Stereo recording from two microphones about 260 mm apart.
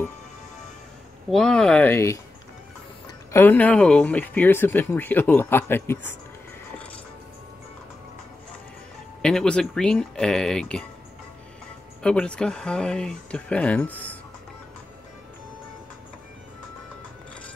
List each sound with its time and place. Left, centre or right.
1.3 s speech: centre
3.3 s speech: centre
9.2 s speech: centre
12.0 s speech: centre